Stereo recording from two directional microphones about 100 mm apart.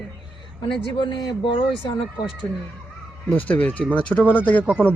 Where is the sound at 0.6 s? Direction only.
55° left (ahead or behind).